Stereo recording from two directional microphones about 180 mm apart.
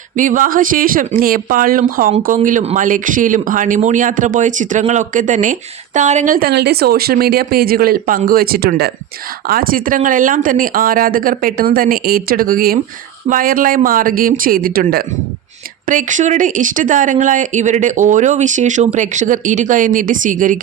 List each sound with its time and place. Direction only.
0.2 s speech: 45° right (ahead or behind)
15.9 s speech: 45° right (ahead or behind)